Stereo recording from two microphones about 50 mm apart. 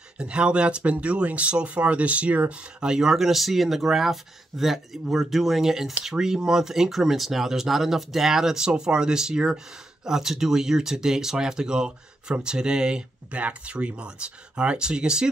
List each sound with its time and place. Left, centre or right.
0.2 s speech: centre